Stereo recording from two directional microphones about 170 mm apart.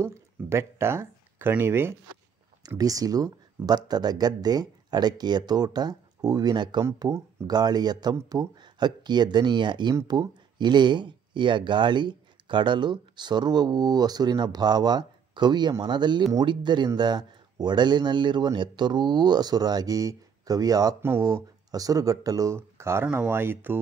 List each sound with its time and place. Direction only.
0.0 s speech: 15° right (ahead or behind)